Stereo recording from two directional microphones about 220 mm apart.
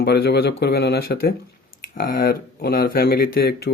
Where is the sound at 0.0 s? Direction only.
45° left (ahead or behind).